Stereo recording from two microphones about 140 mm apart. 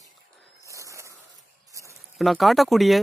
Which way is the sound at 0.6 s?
20° right (ahead or behind).